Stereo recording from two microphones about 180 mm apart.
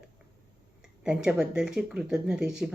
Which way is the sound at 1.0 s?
5° right (ahead or behind).